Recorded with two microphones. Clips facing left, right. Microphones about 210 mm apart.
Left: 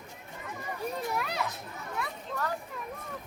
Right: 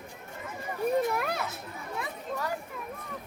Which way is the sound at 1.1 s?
50° right (ahead or behind).